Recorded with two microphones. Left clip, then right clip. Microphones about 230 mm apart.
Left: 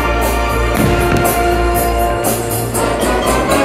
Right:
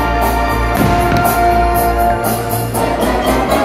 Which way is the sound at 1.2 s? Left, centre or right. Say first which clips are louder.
Right 2 dB; left.